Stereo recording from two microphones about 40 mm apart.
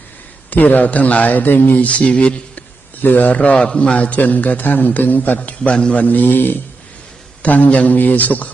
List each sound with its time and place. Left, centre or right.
0.5 s speech: left
3.0 s a man's voice: left
7.4 s a man's voice: left